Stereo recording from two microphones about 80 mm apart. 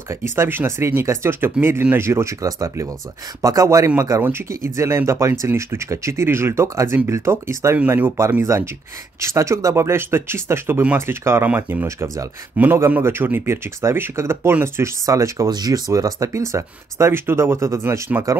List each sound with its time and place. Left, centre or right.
0.1 s speech: right
7.8 s speech: right
8.2 s speech: right
15.5 s speech: right